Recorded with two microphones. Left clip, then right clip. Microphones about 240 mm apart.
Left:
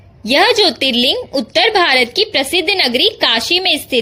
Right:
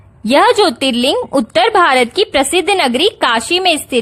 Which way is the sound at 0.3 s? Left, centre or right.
Right.